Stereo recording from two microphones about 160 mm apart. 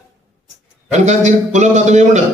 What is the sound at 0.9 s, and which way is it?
A man's voice, 45° right (ahead or behind).